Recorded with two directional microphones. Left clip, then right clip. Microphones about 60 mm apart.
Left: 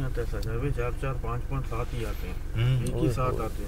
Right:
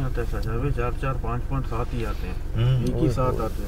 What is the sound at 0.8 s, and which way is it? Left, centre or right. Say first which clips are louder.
Speech: right 4 dB; left.